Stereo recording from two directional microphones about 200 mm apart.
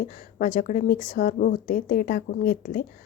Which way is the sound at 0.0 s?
45° left (ahead or behind).